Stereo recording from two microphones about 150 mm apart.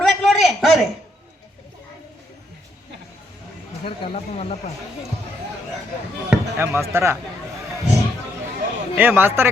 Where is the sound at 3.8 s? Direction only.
40° left (ahead or behind).